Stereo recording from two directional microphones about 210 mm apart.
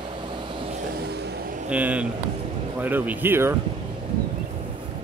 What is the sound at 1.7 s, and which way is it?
Speech, 5° right (ahead or behind).